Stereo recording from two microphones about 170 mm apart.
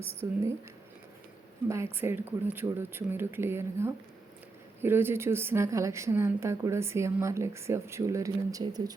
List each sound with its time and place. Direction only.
0.2 s a woman's voice: 15° right (ahead or behind)
1.6 s a woman's voice: 15° right (ahead or behind)